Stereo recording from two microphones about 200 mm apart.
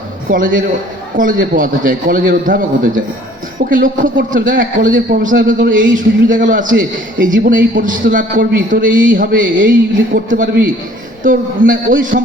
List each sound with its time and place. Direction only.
0.3 s a man's voice: 40° right (ahead or behind)